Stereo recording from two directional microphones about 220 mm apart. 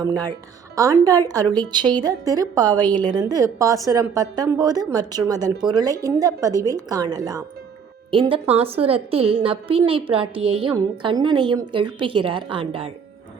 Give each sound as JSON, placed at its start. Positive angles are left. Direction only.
{"t": 0.0, "sound": "a woman's voice", "side_deg": -15}